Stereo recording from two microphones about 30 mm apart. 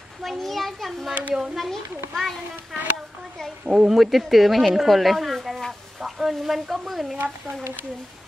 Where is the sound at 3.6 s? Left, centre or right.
Right.